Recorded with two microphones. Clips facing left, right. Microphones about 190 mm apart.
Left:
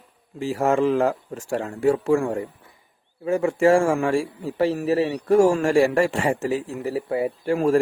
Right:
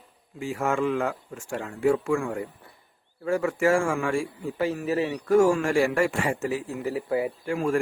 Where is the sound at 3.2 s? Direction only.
25° left (ahead or behind).